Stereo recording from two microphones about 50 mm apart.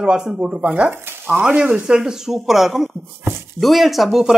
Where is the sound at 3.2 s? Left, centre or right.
Right.